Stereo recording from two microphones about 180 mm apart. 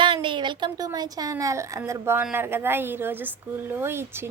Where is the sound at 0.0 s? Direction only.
25° right (ahead or behind).